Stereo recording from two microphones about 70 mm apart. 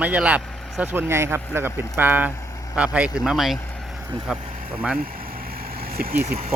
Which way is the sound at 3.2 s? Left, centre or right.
Centre.